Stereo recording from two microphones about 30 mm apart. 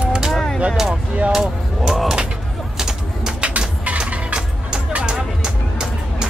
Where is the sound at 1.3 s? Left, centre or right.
Centre.